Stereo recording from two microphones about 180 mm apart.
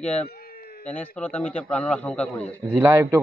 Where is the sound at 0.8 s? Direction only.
10° left (ahead or behind).